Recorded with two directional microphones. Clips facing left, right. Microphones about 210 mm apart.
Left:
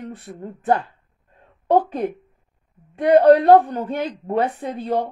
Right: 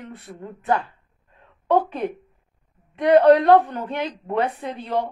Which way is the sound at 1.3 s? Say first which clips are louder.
Left 2 dB; 45° left (ahead or behind).